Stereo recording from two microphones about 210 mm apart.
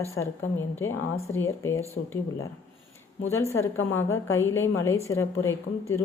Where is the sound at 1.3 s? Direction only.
10° left (ahead or behind).